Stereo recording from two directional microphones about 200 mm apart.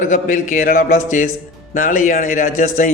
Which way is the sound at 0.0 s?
40° left (ahead or behind).